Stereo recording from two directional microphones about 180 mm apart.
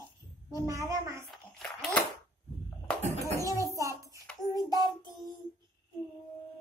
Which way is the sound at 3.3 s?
15° right (ahead or behind).